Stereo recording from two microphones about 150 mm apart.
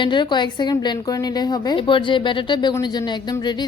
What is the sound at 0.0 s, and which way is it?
A woman's voice, 30° left (ahead or behind).